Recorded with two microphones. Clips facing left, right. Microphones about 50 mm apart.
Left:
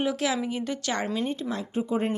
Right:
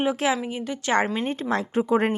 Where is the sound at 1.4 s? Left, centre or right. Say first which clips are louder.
Right 6 dB; right.